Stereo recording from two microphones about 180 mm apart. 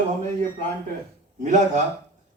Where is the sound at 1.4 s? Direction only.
40° right (ahead or behind).